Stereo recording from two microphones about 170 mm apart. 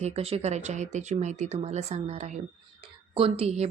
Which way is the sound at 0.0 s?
35° right (ahead or behind).